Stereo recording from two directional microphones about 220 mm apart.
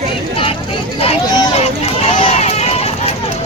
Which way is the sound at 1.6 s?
25° left (ahead or behind).